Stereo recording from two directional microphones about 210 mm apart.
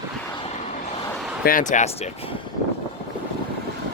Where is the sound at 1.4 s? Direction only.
40° left (ahead or behind).